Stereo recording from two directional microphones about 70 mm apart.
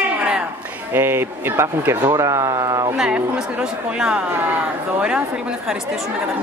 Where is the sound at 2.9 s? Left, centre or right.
Centre.